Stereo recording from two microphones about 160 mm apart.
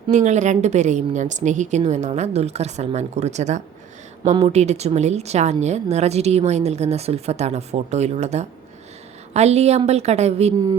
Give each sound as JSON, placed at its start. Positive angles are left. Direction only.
{"t": 0.1, "sound": "a woman's voice", "side_deg": -50}